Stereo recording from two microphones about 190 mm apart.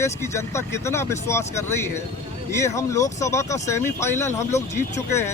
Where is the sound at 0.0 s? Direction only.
15° left (ahead or behind).